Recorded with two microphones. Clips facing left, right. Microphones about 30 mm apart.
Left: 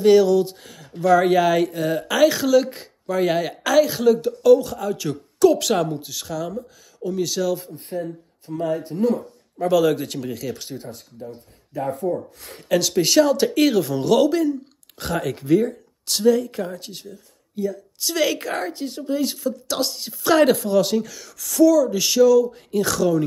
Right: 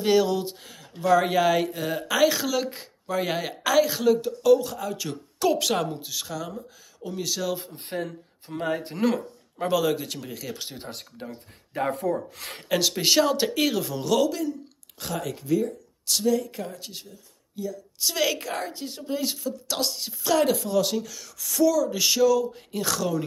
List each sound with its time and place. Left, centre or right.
0.0 s speech: centre
7.7 s speech: right
8.5 s speech: right
8.8 s speech: right
9.7 s speech: centre
10.9 s speech: right
11.9 s speech: right
12.6 s speech: centre
14.1 s speech: centre
16.1 s speech: centre
17.6 s speech: centre
17.9 s speech: centre